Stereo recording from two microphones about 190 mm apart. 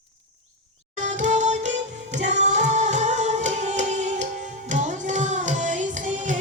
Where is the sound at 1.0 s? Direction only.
40° right (ahead or behind).